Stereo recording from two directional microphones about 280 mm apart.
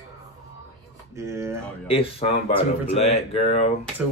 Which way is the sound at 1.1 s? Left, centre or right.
Centre.